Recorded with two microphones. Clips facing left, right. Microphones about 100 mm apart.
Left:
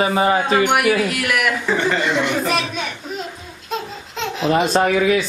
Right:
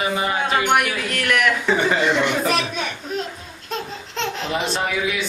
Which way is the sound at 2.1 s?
Centre (ahead or behind).